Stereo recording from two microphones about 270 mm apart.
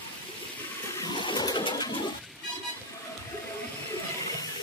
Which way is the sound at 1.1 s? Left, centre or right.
Centre.